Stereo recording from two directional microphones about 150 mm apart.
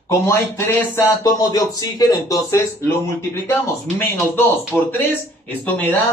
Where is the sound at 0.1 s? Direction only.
15° left (ahead or behind).